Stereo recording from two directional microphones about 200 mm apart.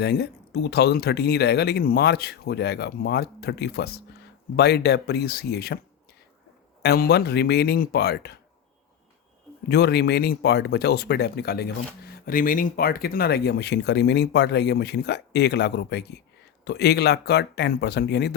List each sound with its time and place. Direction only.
0.0 s speech: 55° left (ahead or behind)
6.8 s speech: 50° left (ahead or behind)
9.6 s speech: 55° left (ahead or behind)